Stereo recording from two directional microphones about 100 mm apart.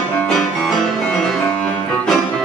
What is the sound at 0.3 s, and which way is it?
Music, 5° left (ahead or behind).